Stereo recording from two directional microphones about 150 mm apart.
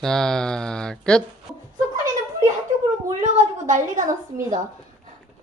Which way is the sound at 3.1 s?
50° right (ahead or behind).